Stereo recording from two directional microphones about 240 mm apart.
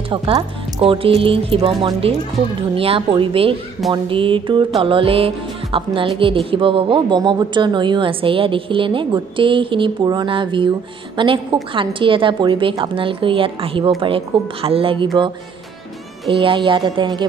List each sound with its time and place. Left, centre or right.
0.1 s speech: right
16.3 s speech: right